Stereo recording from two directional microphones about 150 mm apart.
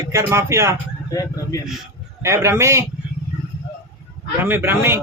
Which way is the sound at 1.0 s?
25° left (ahead or behind).